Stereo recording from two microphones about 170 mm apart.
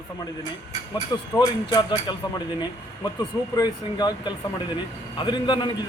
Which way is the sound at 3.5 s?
25° left (ahead or behind).